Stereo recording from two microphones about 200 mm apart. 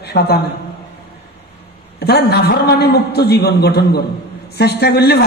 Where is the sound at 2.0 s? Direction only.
55° left (ahead or behind).